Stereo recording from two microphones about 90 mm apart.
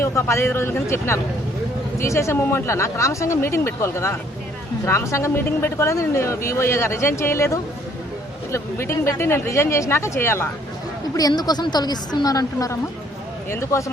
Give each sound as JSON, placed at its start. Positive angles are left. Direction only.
{"t": 0.0, "sound": "speech", "side_deg": 30}
{"t": 11.1, "sound": "a woman's voice", "side_deg": 45}